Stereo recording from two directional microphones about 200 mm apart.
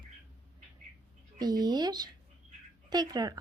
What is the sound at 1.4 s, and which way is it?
Speech, 20° right (ahead or behind).